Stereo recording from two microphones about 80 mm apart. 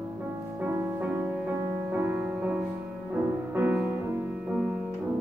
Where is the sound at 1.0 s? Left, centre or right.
Centre.